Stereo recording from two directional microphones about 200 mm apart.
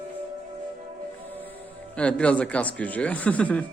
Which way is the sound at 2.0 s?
5° left (ahead or behind).